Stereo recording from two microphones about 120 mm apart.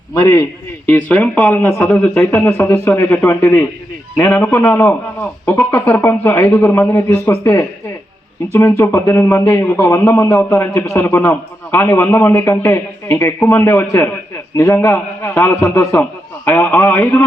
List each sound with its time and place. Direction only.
0.1 s a man's voice: 30° left (ahead or behind)
0.9 s a man's voice: 10° left (ahead or behind)